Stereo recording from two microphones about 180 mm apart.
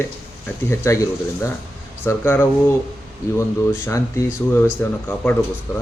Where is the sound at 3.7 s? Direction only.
15° left (ahead or behind).